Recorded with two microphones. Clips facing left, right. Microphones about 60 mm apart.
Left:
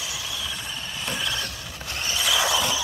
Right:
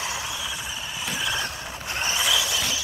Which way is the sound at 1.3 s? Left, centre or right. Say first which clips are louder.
Right 3 dB; right.